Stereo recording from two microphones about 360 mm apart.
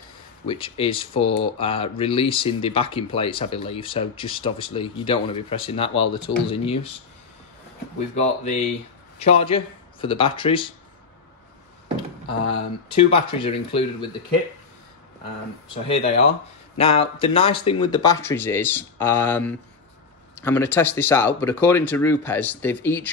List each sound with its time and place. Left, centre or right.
0.5 s speech: centre
8.2 s speech: centre
12.9 s speech: centre
15.7 s speech: centre